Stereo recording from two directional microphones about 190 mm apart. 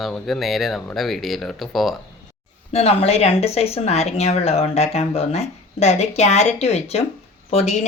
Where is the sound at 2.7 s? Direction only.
35° left (ahead or behind).